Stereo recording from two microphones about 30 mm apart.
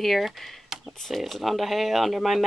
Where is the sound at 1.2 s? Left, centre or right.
Centre.